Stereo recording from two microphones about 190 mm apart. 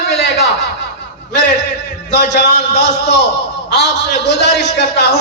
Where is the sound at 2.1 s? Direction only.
65° left (ahead or behind).